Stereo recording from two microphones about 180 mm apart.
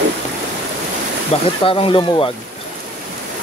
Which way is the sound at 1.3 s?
35° left (ahead or behind).